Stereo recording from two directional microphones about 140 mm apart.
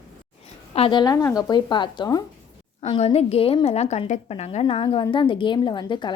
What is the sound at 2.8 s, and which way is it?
A woman's voice, 45° left (ahead or behind).